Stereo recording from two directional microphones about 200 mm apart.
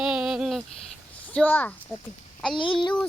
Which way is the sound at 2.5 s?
25° left (ahead or behind).